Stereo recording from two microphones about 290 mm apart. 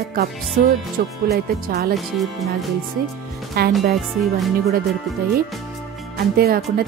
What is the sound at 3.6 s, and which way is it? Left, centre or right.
Speech, right.